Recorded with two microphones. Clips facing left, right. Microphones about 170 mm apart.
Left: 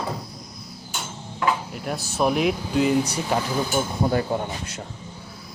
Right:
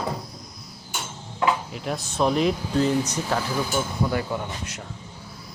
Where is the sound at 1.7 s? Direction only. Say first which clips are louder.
Even; 5° left (ahead or behind).